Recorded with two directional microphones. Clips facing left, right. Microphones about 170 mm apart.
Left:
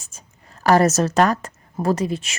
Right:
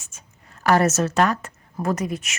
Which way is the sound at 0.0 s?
35° left (ahead or behind).